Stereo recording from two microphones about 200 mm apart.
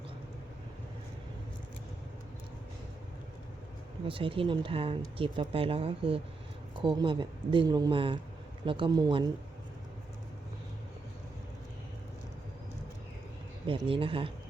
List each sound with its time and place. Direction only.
4.0 s speech: 25° right (ahead or behind)
13.7 s speech: 25° right (ahead or behind)